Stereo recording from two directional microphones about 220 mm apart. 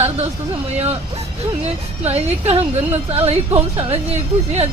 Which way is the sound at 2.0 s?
30° right (ahead or behind).